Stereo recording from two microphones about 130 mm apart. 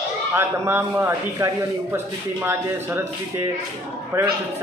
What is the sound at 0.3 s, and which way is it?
Speech, 20° right (ahead or behind).